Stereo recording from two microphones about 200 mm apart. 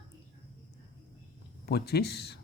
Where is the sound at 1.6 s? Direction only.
55° left (ahead or behind).